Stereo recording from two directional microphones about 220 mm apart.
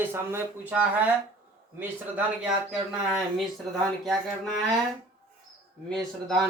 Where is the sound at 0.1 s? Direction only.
10° right (ahead or behind).